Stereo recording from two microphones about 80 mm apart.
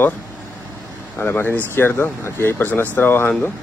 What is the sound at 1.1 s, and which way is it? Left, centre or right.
Speech, left.